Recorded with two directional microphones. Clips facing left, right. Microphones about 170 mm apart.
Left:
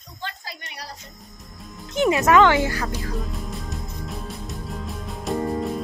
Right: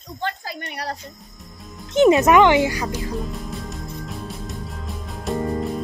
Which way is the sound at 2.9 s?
Centre (ahead or behind).